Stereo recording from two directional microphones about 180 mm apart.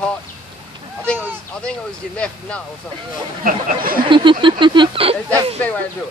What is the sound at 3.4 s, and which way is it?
Speech, 55° right (ahead or behind).